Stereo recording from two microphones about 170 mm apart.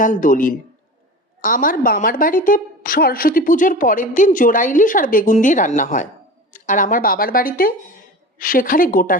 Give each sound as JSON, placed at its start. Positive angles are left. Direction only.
{"t": 0.0, "sound": "a woman's voice", "side_deg": 50}